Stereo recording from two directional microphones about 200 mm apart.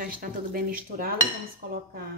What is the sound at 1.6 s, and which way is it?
Speech, 40° right (ahead or behind).